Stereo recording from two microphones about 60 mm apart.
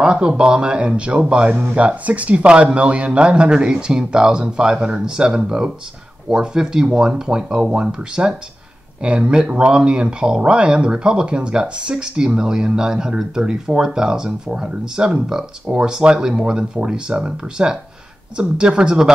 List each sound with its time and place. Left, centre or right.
0.0 s speech: centre